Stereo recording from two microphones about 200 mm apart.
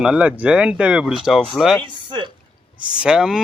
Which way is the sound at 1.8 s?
25° right (ahead or behind).